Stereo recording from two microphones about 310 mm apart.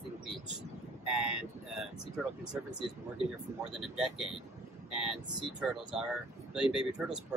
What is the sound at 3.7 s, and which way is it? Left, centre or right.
Speech, centre.